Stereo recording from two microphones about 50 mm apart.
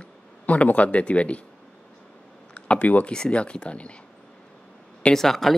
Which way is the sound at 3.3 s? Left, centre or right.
Left.